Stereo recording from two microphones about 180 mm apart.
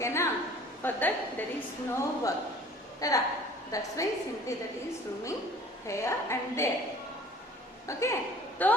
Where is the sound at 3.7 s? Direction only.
20° left (ahead or behind).